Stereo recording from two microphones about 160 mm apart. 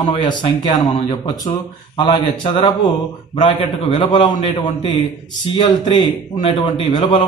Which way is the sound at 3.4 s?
30° left (ahead or behind).